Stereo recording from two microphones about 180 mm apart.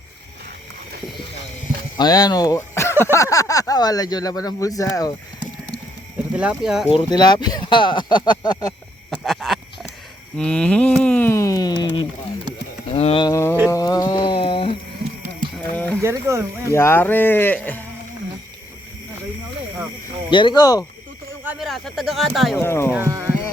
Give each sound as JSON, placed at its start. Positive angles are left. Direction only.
{"t": 2.0, "sound": "speech", "side_deg": 20}
{"t": 6.3, "sound": "speech", "side_deg": -5}
{"t": 6.8, "sound": "speech", "side_deg": 25}
{"t": 9.0, "sound": "a sound", "side_deg": 0}
{"t": 13.2, "sound": "a sound", "side_deg": 15}
{"t": 15.5, "sound": "mechanisms", "side_deg": 10}
{"t": 16.0, "sound": "wild animals", "side_deg": -15}
{"t": 16.6, "sound": "speech", "side_deg": 15}
{"t": 20.3, "sound": "speech", "side_deg": 25}
{"t": 21.4, "sound": "a sound", "side_deg": 0}
{"t": 22.5, "sound": "speech", "side_deg": 15}
{"t": 22.9, "sound": "speech", "side_deg": -15}